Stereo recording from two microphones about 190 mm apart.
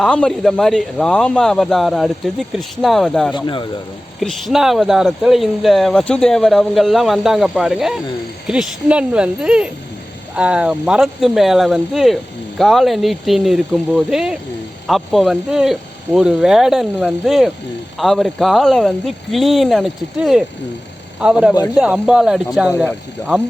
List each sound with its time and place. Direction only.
0.0 s speech: 5° left (ahead or behind)
3.3 s speech: 25° left (ahead or behind)
4.2 s speech: centre (ahead or behind)